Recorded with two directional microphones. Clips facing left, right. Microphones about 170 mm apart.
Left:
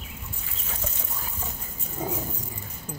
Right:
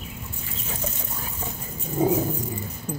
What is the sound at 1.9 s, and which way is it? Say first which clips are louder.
Dog: right 10 dB; 20° right (ahead or behind).